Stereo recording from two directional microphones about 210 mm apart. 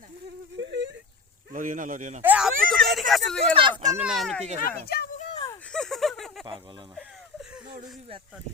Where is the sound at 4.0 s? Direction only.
Centre (ahead or behind).